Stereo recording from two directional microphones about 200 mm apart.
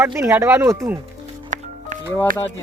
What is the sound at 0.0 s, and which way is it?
Speech, 10° right (ahead or behind).